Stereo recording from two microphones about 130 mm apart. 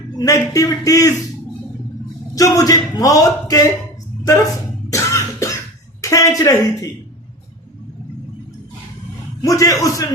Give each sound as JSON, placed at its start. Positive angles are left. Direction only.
{"t": 0.2, "sound": "a man's voice", "side_deg": 25}
{"t": 2.3, "sound": "a man's voice", "side_deg": 25}
{"t": 4.9, "sound": "cough", "side_deg": 25}
{"t": 6.0, "sound": "a woman's voice", "side_deg": 25}
{"t": 9.4, "sound": "a man's voice", "side_deg": 25}